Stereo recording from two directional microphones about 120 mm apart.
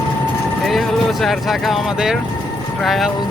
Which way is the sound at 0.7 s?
Centre (ahead or behind).